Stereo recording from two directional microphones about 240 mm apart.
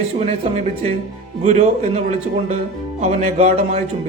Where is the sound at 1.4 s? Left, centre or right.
Right.